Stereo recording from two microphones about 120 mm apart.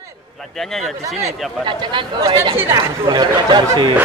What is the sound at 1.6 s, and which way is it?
Speech, 45° right (ahead or behind).